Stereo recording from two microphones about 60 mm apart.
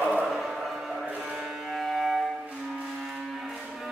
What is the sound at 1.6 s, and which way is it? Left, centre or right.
Music, centre.